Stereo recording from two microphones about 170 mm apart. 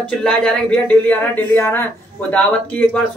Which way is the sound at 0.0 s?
5° left (ahead or behind).